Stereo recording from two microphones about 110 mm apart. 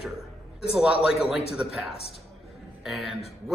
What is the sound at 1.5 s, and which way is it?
A man's voice, 5° right (ahead or behind).